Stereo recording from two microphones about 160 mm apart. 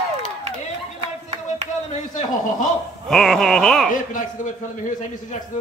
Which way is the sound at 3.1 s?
Centre (ahead or behind).